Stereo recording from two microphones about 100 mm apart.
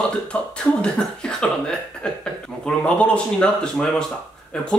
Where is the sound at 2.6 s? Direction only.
10° left (ahead or behind).